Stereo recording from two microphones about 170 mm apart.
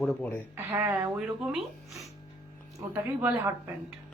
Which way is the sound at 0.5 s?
15° right (ahead or behind).